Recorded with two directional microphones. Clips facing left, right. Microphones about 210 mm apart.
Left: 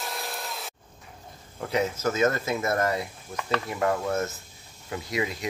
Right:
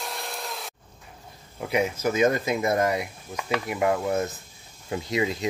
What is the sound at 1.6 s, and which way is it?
Speech, 10° right (ahead or behind).